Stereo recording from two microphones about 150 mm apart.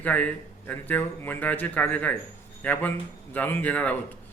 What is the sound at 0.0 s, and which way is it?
Speech, 10° left (ahead or behind).